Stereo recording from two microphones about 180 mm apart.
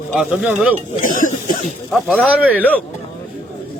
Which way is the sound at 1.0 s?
45° left (ahead or behind).